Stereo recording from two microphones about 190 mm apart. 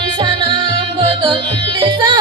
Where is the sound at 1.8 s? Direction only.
25° right (ahead or behind).